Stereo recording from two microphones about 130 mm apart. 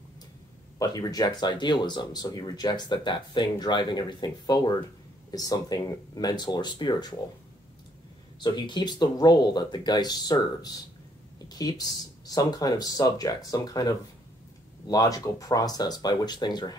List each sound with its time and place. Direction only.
0.7 s speech: 30° left (ahead or behind)
8.4 s speech: 35° left (ahead or behind)